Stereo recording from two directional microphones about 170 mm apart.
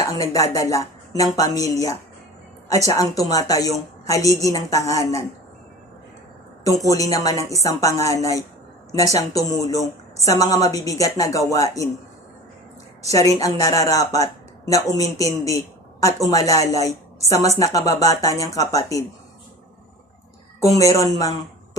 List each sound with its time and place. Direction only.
0.0 s speech: 20° left (ahead or behind)
2.7 s speech: 20° left (ahead or behind)
6.8 s speech: 20° left (ahead or behind)
13.1 s speech: 20° left (ahead or behind)
20.6 s speech: 20° left (ahead or behind)